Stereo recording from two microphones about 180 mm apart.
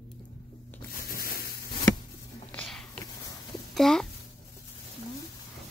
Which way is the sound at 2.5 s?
5° left (ahead or behind).